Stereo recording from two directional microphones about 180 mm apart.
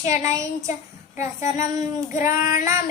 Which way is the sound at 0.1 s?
15° right (ahead or behind).